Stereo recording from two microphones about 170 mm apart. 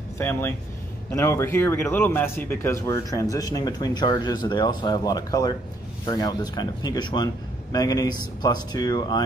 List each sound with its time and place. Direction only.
0.2 s a man's voice: 10° left (ahead or behind)